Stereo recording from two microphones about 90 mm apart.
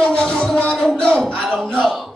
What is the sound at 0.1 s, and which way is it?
Music, 10° left (ahead or behind).